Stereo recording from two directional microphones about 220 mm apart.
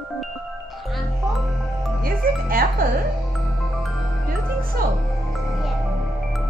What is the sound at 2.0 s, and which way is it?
Music, 40° right (ahead or behind).